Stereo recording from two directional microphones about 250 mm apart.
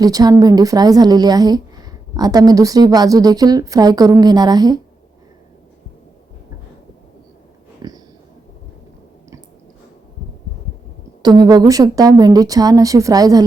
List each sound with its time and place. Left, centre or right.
0.0 s a woman's voice: centre
7.8 s sniff: centre
11.2 s a woman's voice: centre